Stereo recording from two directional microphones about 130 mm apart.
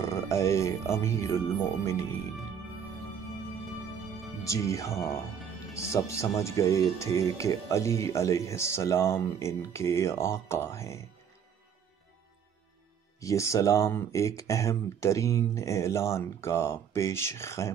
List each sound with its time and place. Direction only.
0.0 s speech: 20° left (ahead or behind)
4.5 s speech: 25° left (ahead or behind)
13.2 s speech: 25° left (ahead or behind)